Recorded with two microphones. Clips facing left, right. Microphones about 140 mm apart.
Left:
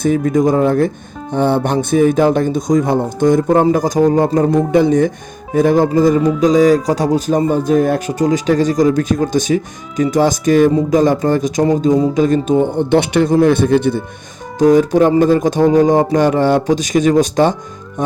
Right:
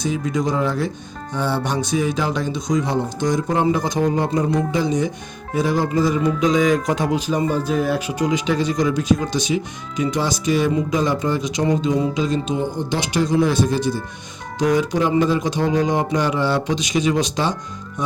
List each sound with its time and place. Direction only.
0.0 s speech: 50° left (ahead or behind)
14.6 s speech: 45° left (ahead or behind)